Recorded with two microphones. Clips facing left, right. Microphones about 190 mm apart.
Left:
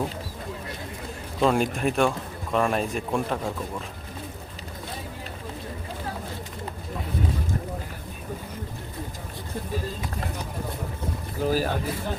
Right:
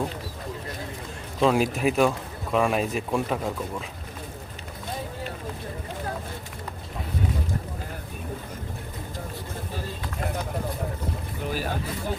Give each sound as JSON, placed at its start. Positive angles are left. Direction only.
{"t": 1.4, "sound": "a man's voice", "side_deg": 0}
{"t": 11.4, "sound": "speech", "side_deg": 40}